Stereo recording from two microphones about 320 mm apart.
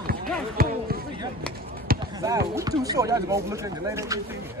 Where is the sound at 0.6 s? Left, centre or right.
Right.